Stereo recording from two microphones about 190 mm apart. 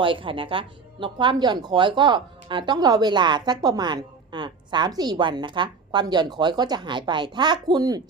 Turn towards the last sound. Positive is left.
turn(degrees=-20)  # may be behind; listen again after turning